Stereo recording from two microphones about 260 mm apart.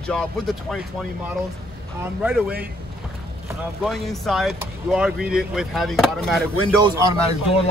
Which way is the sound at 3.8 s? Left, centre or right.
Centre.